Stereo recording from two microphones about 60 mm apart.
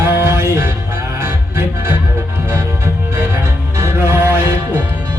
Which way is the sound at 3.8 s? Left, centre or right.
Right.